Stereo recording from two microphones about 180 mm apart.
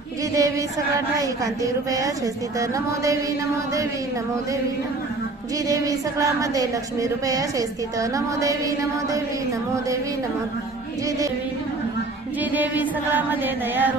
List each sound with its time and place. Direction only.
0.3 s a woman's voice: 20° right (ahead or behind)
2.6 s chant: 20° right (ahead or behind)
5.7 s a woman's voice: 20° right (ahead or behind)
12.5 s chant: 10° right (ahead or behind)